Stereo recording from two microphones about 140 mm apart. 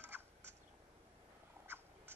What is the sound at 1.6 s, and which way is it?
Cat, 15° right (ahead or behind).